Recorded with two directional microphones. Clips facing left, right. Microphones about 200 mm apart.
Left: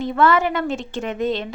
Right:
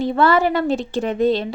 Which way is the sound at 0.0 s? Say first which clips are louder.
Right 2 dB; 35° right (ahead or behind).